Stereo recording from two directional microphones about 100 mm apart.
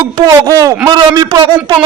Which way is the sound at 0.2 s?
40° right (ahead or behind).